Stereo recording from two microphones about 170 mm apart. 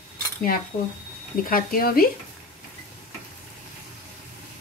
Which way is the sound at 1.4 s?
55° left (ahead or behind).